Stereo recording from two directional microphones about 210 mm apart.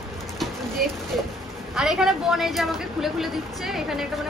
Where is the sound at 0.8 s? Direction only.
45° right (ahead or behind).